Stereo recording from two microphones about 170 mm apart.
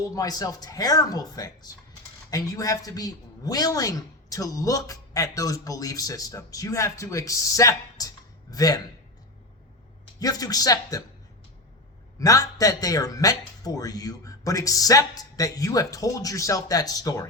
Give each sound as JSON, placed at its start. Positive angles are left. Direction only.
{"t": 0.1, "sound": "a woman's voice", "side_deg": 20}
{"t": 10.2, "sound": "a woman's voice", "side_deg": 20}
{"t": 12.2, "sound": "a woman's voice", "side_deg": 20}